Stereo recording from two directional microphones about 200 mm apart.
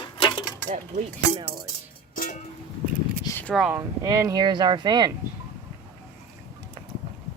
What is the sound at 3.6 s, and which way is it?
Speech, 15° right (ahead or behind).